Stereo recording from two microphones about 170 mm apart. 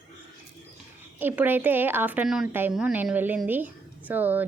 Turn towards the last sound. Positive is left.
turn(degrees=-10)  # may be behind; listen again after turning